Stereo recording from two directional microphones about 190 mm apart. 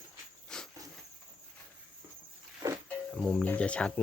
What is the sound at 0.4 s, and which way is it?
Cricket, 5° left (ahead or behind).